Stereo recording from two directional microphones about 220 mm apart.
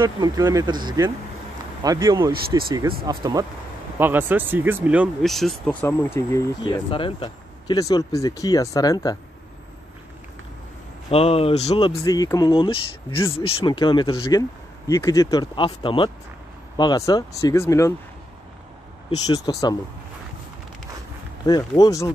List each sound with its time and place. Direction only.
0.0 s speech: 15° right (ahead or behind); by 9.2 s 15° left (ahead or behind)
11.1 s speech: 25° left (ahead or behind)
19.0 s speech: 15° left (ahead or behind)
21.5 s speech: 20° left (ahead or behind)